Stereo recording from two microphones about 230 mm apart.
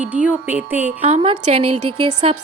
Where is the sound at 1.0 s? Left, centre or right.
Right.